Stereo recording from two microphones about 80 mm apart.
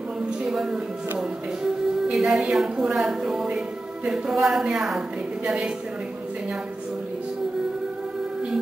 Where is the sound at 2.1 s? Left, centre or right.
Centre.